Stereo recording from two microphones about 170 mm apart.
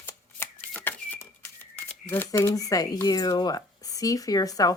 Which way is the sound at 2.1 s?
15° left (ahead or behind).